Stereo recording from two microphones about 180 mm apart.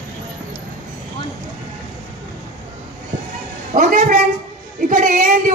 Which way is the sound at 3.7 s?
45° right (ahead or behind).